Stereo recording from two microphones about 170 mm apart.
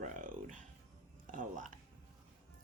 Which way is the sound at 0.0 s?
50° right (ahead or behind).